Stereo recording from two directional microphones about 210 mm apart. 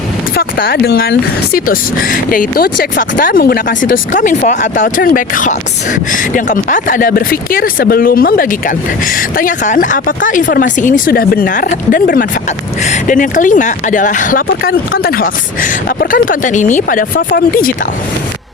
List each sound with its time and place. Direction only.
0.3 s speech: 45° left (ahead or behind)